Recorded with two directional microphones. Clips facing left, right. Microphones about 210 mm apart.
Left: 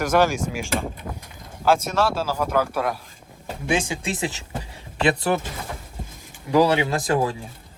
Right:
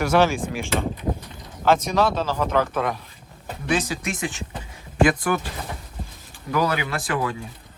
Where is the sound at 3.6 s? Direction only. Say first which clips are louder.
Even; 25° left (ahead or behind).